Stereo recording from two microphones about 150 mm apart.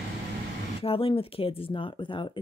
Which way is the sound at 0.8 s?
40° left (ahead or behind).